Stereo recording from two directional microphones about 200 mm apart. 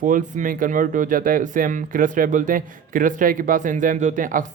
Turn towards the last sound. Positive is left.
turn(degrees=-40)  # may be behind; listen again after turning